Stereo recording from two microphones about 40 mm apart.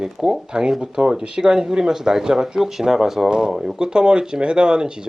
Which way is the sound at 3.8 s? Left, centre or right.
Right.